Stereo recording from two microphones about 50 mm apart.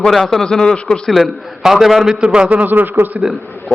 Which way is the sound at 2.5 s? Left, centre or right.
Right.